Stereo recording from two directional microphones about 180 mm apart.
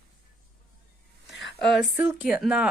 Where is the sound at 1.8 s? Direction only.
5° right (ahead or behind).